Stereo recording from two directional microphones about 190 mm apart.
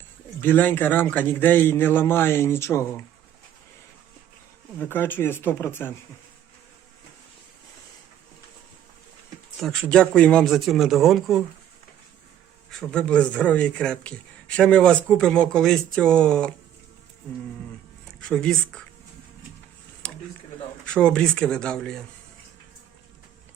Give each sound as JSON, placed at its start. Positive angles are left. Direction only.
{"t": 0.4, "sound": "a man's voice", "side_deg": 10}
{"t": 4.9, "sound": "a man's voice", "side_deg": 10}
{"t": 9.6, "sound": "a man's voice", "side_deg": 5}
{"t": 12.9, "sound": "a man's voice", "side_deg": 5}
{"t": 18.2, "sound": "speech", "side_deg": 5}
{"t": 20.0, "sound": "a sound", "side_deg": 5}
{"t": 20.8, "sound": "a man's voice", "side_deg": 5}